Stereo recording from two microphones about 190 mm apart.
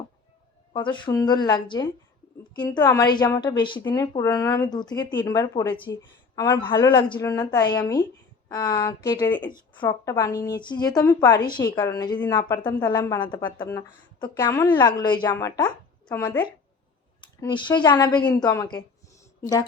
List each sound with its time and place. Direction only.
0.7 s a woman's voice: 25° left (ahead or behind)
17.2 s a woman's voice: 25° left (ahead or behind)